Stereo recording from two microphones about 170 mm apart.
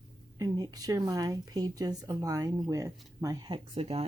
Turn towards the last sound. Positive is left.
turn(degrees=-35)  # may be behind; listen again after turning